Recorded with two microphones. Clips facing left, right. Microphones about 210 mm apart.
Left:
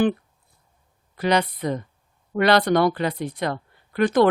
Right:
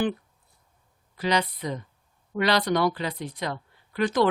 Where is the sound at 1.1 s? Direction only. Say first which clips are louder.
Left 4 dB; 55° left (ahead or behind).